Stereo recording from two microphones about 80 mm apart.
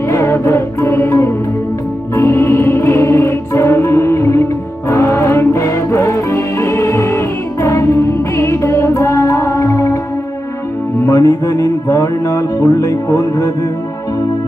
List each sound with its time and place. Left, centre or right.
0.1 s music: left
11.0 s music: left